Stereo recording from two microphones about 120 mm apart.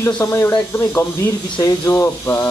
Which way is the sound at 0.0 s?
20° left (ahead or behind).